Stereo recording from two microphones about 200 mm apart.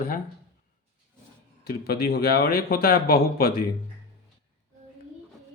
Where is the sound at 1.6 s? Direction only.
50° left (ahead or behind).